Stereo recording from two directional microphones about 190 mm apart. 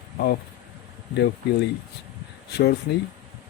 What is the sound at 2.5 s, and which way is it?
Speech, 60° left (ahead or behind).